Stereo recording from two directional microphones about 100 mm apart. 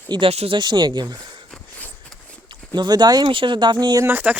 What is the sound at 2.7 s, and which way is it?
Speech, 45° right (ahead or behind).